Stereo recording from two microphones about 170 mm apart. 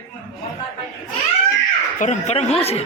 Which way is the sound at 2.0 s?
40° left (ahead or behind).